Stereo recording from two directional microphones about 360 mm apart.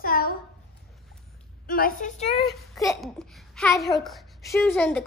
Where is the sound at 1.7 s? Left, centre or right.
Left.